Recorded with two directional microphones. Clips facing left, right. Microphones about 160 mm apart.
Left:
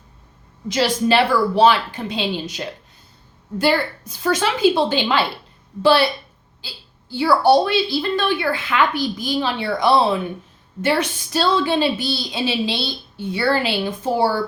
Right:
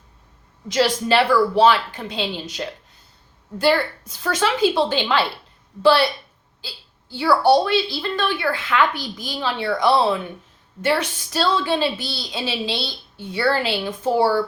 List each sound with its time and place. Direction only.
0.7 s a woman's voice: 15° left (ahead or behind)
4.2 s a woman's voice: 15° left (ahead or behind)
7.2 s a woman's voice: 15° left (ahead or behind)